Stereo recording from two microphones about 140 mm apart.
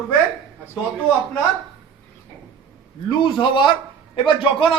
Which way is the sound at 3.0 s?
35° left (ahead or behind).